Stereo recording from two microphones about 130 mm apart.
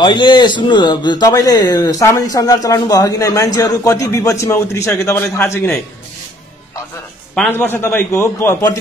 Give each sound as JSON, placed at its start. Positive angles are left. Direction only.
{"t": 0.0, "sound": "speech", "side_deg": 35}
{"t": 7.5, "sound": "a man's voice", "side_deg": 20}